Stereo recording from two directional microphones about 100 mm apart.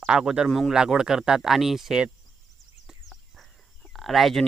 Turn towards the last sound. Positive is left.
turn(degrees=0)  # may be behind; listen again after turning